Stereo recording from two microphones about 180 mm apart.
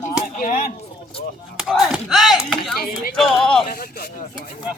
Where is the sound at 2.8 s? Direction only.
55° left (ahead or behind).